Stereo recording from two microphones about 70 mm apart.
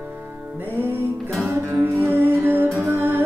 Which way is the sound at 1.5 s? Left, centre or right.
Right.